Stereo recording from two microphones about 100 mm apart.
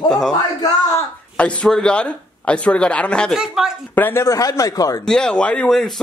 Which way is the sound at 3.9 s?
20° left (ahead or behind).